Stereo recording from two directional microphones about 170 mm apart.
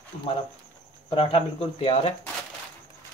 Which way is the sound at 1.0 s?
35° left (ahead or behind).